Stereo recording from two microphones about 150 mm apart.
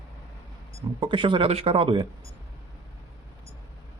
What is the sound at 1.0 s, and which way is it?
Speech, 35° right (ahead or behind).